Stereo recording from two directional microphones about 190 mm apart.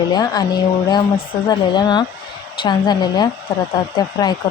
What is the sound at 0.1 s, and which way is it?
Speech, 20° left (ahead or behind).